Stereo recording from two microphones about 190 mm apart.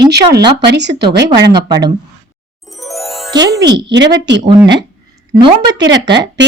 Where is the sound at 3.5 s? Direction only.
60° right (ahead or behind).